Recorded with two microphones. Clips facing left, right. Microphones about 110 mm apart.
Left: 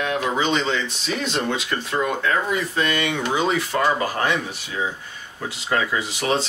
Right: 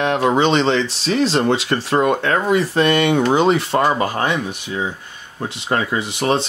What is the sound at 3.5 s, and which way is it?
Speech, 30° right (ahead or behind).